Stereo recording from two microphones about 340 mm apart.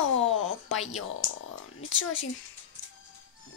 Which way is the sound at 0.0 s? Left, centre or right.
Left.